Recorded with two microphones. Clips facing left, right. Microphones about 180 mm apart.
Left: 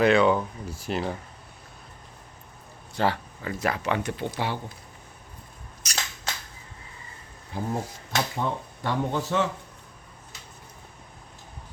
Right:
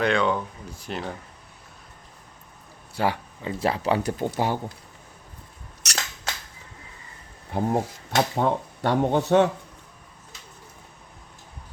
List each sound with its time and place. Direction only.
0.0 s speech: 5° left (ahead or behind)
2.9 s speech: 10° right (ahead or behind)
3.4 s speech: 30° right (ahead or behind)
5.8 s scissors: 75° right (ahead or behind)
7.5 s speech: 60° right (ahead or behind)